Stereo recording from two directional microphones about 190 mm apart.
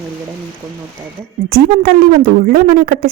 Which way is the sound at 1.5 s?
50° right (ahead or behind).